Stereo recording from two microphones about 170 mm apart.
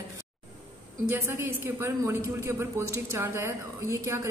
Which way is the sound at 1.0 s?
15° right (ahead or behind).